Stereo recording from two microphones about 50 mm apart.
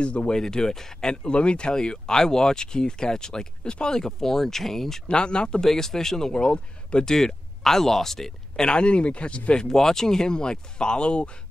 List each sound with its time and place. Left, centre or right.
0.0 s speech: left
0.4 s speech: centre
5.1 s speech: centre
9.7 s speech: centre